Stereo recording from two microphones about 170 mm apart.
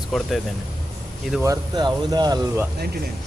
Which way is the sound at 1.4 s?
20° right (ahead or behind).